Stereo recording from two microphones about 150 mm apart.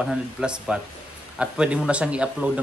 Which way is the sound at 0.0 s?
5° right (ahead or behind).